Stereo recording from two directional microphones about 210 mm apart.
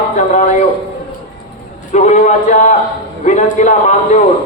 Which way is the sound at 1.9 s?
35° left (ahead or behind).